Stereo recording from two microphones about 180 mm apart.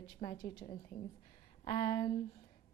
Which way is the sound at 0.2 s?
30° left (ahead or behind).